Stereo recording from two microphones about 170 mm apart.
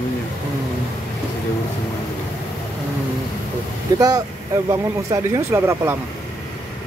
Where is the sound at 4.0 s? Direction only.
20° right (ahead or behind).